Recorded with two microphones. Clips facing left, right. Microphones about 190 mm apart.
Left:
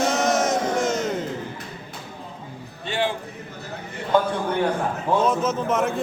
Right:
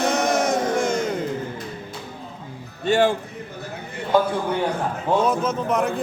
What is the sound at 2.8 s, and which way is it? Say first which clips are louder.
Music: right 7 dB; 45° right (ahead or behind).